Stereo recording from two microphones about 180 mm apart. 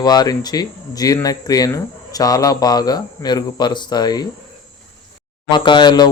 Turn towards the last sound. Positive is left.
turn(degrees=25)  # may be behind; listen again after turning